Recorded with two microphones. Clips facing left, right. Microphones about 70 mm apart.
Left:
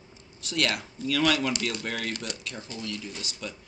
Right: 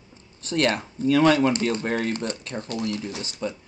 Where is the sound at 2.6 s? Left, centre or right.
Right.